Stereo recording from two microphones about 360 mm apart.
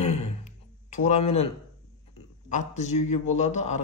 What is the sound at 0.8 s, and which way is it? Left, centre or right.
Speech, centre.